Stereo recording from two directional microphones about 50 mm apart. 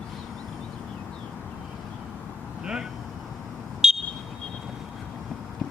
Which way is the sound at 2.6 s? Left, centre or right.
Centre.